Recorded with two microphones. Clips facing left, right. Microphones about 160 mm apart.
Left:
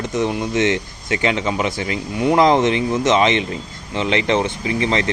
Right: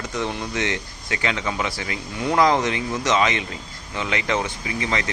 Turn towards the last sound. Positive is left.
turn(degrees=25)  # may be behind; listen again after turning